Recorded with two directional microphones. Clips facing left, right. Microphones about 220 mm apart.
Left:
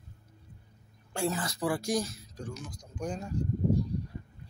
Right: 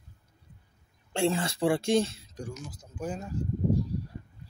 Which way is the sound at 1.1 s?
25° right (ahead or behind).